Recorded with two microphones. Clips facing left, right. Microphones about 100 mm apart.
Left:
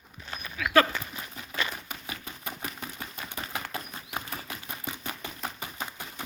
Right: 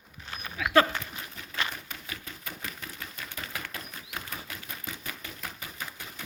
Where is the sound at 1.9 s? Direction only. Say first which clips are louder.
Left 2 dB; 20° left (ahead or behind).